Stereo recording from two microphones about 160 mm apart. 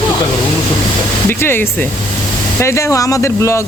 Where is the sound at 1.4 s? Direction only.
15° left (ahead or behind).